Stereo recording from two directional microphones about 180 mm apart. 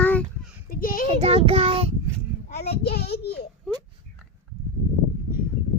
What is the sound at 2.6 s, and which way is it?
Speech, 60° left (ahead or behind).